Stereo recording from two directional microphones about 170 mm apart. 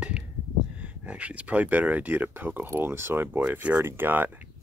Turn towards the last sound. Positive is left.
turn(degrees=-10)  # may be behind; listen again after turning